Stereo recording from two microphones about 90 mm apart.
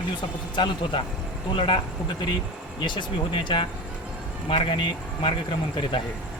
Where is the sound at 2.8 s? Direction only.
60° left (ahead or behind).